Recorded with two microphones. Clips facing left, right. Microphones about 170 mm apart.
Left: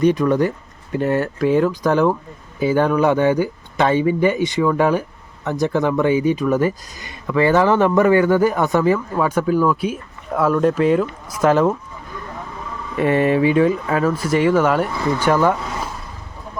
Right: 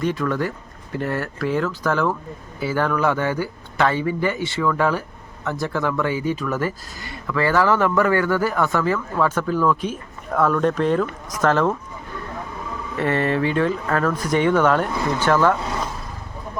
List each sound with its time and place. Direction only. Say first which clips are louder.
0.0 s speech: left 7 dB; 20° left (ahead or behind)
13.0 s speech: left 5 dB; 15° left (ahead or behind)